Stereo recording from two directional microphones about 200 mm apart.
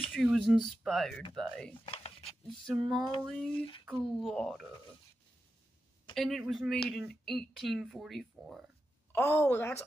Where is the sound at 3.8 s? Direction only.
Centre (ahead or behind).